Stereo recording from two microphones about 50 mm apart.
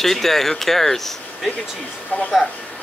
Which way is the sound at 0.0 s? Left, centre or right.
Centre.